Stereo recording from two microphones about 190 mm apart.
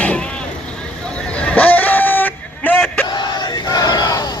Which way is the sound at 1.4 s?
5° left (ahead or behind).